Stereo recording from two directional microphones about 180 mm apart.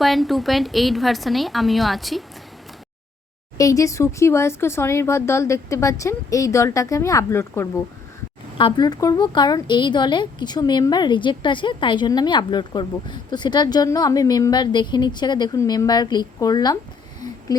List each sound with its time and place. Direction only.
0.0 s a woman's voice: centre (ahead or behind)
3.6 s speech: 20° left (ahead or behind)
8.5 s a woman's voice: 25° left (ahead or behind)
17.2 s a sound: 20° left (ahead or behind)